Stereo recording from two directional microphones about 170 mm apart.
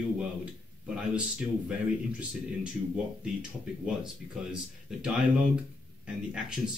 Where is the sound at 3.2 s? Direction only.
5° right (ahead or behind).